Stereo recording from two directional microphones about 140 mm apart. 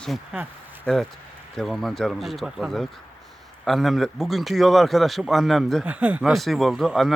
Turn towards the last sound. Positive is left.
turn(degrees=0)  # may be behind; listen again after turning